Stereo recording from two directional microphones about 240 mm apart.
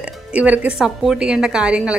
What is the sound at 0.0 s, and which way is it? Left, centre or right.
Speech, centre.